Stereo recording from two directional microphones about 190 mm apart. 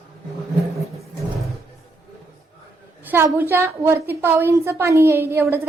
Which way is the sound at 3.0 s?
10° right (ahead or behind).